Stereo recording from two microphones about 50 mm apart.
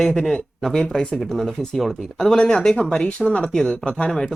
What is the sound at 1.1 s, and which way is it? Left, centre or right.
Speech, centre.